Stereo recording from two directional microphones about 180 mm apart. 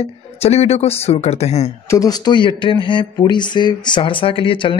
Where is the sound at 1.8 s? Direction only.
20° left (ahead or behind).